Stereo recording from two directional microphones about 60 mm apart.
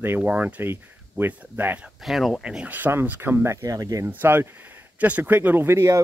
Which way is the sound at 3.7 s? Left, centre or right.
Right.